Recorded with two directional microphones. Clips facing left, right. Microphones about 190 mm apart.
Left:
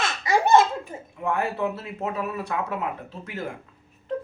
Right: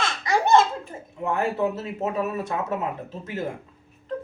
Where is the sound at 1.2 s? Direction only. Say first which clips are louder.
Right 2 dB; 25° right (ahead or behind).